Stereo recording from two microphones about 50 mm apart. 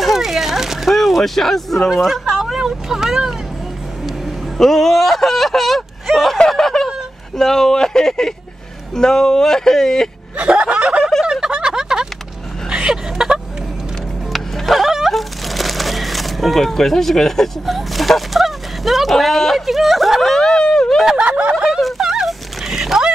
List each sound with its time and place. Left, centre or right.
0.0 s a sound: centre
1.9 s speech: centre
4.6 s speech: centre
6.3 s snicker: centre
7.3 s speech: centre
10.3 s snicker: right
11.4 s a sound: centre
14.3 s a sound: centre
21.2 s snicker: right
21.5 s fowl: centre